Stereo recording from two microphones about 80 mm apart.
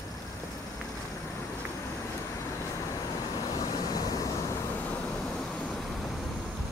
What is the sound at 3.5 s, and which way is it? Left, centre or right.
Vehicle, left.